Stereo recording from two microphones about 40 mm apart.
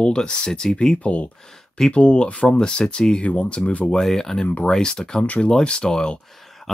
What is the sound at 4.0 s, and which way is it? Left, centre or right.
Speech, centre.